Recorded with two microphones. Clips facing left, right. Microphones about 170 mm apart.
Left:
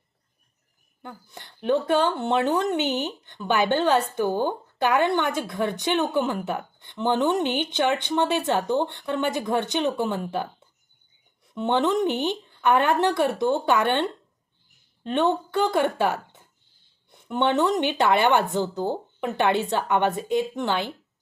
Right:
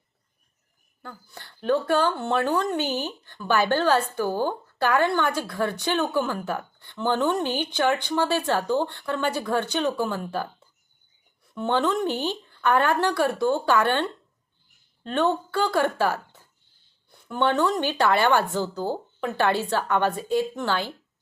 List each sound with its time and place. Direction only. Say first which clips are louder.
1.0 s a woman's voice: left 1 dB; 20° left (ahead or behind)